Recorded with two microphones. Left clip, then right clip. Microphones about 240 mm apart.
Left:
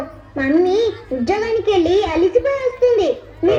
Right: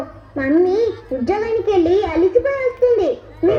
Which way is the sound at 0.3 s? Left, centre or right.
Left.